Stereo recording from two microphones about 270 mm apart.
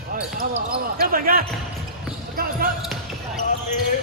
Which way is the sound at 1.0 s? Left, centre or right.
Right.